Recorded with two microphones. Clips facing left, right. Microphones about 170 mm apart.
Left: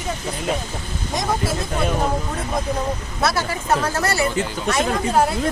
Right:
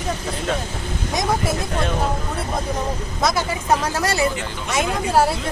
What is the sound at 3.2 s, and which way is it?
Speech, 15° right (ahead or behind).